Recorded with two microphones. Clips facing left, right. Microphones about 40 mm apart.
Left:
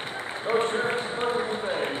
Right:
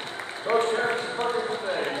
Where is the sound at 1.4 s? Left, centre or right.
Left.